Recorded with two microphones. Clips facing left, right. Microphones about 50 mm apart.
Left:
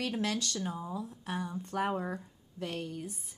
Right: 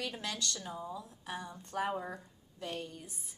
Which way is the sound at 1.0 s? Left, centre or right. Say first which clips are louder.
Left 5 dB; centre.